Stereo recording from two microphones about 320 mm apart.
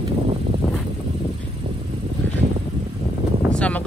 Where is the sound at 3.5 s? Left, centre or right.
Centre.